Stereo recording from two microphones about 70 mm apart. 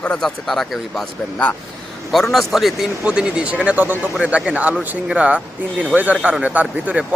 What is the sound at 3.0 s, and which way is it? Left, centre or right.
Speech, centre.